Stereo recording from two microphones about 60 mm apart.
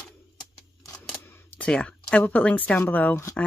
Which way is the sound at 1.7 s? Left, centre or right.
Centre.